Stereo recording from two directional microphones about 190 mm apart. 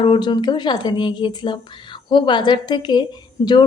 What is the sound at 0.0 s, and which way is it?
Speech, 25° left (ahead or behind).